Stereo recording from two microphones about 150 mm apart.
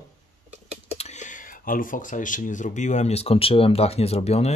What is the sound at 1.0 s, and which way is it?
Speech, 50° left (ahead or behind).